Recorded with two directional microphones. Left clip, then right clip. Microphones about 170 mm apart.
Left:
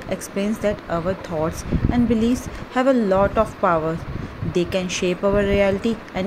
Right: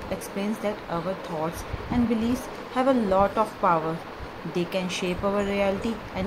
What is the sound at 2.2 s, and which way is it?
Speech, 25° left (ahead or behind).